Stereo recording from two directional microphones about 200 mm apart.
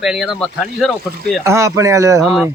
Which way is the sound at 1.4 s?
15° right (ahead or behind).